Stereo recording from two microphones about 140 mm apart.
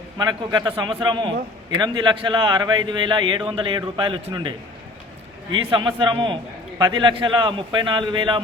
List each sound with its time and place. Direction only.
0.2 s a man's voice: 30° right (ahead or behind)